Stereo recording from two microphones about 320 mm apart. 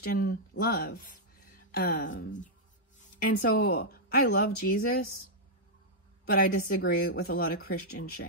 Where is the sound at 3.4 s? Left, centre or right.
Left.